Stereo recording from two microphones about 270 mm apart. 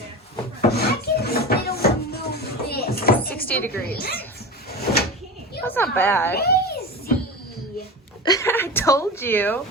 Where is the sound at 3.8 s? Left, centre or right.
Left.